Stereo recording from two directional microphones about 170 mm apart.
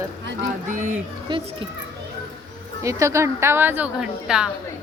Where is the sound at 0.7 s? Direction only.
50° right (ahead or behind).